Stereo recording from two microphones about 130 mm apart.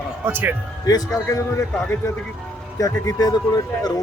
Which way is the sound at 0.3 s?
15° right (ahead or behind).